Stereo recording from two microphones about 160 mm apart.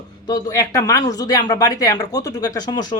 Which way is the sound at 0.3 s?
20° left (ahead or behind).